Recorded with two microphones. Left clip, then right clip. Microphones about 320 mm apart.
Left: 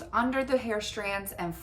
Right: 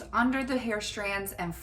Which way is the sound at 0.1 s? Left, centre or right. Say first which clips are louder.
Left 1 dB; centre.